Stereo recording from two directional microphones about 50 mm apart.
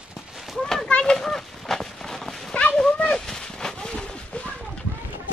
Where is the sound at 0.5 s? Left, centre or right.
Centre.